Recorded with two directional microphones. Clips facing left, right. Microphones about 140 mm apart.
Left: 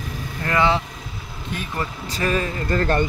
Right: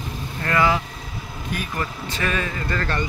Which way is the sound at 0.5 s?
25° left (ahead or behind).